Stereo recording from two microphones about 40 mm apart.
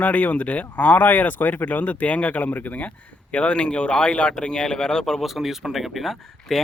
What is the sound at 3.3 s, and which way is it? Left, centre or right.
Speech, left.